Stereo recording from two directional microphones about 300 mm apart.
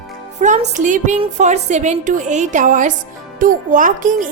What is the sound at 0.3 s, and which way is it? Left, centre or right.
A woman's voice, right.